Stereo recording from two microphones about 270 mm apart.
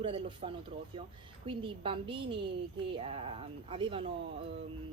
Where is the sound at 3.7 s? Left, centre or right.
Centre.